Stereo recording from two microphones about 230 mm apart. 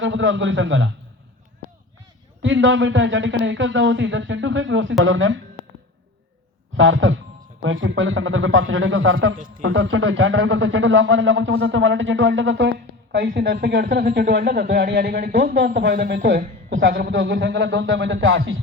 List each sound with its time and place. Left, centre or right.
0.0 s speech: right
2.4 s a man's voice: right
6.7 s a man's voice: right